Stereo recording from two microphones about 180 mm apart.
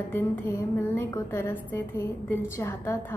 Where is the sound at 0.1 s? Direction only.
10° left (ahead or behind).